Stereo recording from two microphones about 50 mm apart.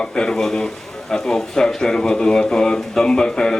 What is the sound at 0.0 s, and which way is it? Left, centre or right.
Speech, centre.